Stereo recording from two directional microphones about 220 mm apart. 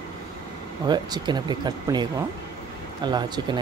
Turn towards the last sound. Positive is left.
turn(degrees=-20)  # may be behind; listen again after turning